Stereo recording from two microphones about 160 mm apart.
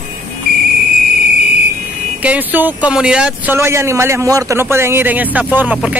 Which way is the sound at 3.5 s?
15° right (ahead or behind).